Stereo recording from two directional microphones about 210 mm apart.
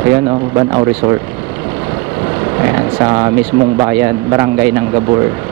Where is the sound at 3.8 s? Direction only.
15° right (ahead or behind).